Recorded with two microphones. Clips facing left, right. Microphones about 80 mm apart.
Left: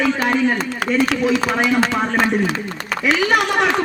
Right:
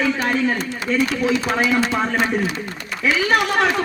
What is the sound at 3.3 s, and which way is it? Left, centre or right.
Speech, centre.